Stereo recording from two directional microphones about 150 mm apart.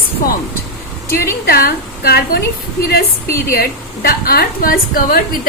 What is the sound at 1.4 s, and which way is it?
Speech, 80° left.